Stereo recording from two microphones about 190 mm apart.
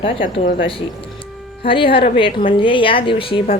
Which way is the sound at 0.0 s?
40° left (ahead or behind).